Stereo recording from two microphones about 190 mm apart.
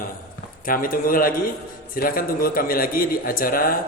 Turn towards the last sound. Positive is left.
turn(degrees=50)  # may be behind; listen again after turning